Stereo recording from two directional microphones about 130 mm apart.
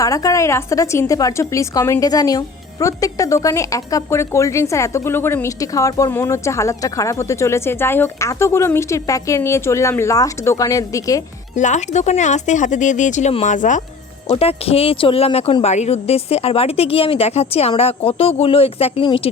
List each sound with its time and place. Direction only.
0.0 s a woman's voice: 25° left (ahead or behind)
11.5 s speech: 65° left (ahead or behind)
14.3 s a woman's voice: 50° left (ahead or behind)